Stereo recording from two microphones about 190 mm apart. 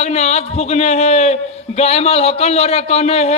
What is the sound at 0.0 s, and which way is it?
A man's voice, 35° left (ahead or behind).